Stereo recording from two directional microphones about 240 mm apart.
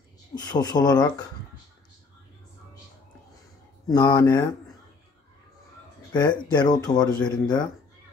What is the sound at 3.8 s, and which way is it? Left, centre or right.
Speech, centre.